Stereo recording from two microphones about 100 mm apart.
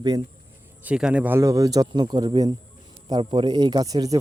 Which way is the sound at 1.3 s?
30° right (ahead or behind).